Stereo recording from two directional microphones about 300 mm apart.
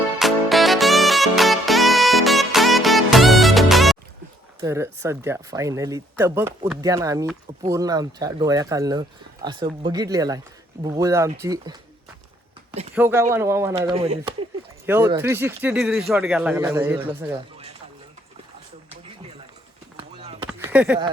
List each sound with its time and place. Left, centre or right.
0.2 s music: centre
4.6 s speech: centre
12.9 s speech: centre
13.7 s speech: centre
14.8 s speech: centre
20.0 s a sound: centre
20.5 s a sound: centre